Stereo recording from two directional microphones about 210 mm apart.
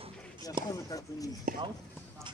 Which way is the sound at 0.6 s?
20° right (ahead or behind).